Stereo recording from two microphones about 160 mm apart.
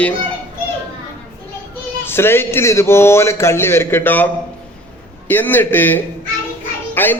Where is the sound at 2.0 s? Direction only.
15° left (ahead or behind).